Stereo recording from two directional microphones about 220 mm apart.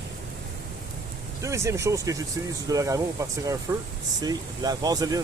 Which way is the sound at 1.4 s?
15° right (ahead or behind).